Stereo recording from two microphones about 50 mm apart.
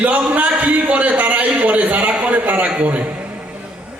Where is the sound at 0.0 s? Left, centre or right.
Right.